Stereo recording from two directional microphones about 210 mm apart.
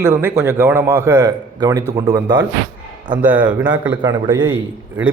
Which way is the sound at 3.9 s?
20° right (ahead or behind).